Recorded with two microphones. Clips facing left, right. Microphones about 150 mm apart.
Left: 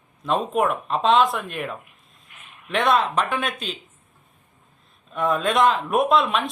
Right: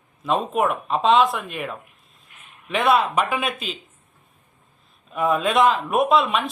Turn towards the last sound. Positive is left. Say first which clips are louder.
# right 1 dB
turn(degrees=0)  # may be behind; listen again after turning